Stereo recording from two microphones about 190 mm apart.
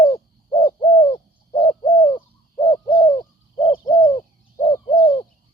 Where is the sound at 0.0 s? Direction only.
25° left (ahead or behind).